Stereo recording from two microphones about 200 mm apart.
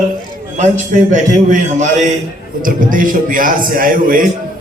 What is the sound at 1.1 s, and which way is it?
A man's voice, 40° right (ahead or behind).